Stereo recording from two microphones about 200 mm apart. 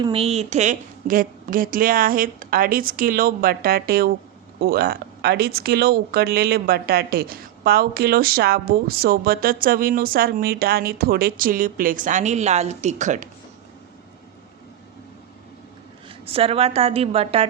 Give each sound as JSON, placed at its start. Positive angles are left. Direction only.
{"t": 0.0, "sound": "speech", "side_deg": -30}
{"t": 16.2, "sound": "a woman's voice", "side_deg": -30}